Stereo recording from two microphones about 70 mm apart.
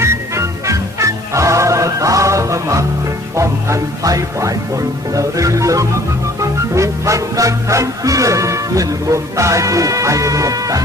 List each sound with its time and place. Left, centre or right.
0.0 s music: right